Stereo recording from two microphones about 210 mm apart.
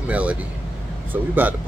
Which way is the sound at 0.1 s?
5° right (ahead or behind).